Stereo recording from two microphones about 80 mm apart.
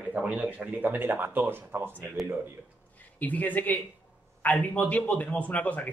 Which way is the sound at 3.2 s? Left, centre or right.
Centre.